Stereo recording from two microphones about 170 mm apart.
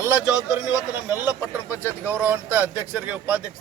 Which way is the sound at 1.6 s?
10° right (ahead or behind).